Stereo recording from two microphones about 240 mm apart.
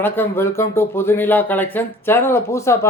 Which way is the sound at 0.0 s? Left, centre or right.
Centre.